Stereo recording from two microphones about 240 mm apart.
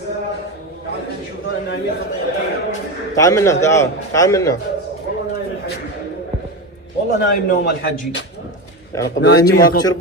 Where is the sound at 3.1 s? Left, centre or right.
Centre.